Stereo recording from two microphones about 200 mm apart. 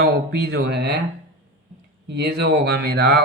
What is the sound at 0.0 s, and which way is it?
Speech, 50° right (ahead or behind).